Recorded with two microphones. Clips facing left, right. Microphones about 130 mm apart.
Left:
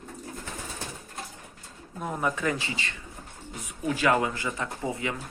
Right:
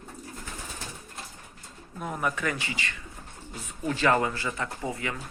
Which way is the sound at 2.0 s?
20° left (ahead or behind).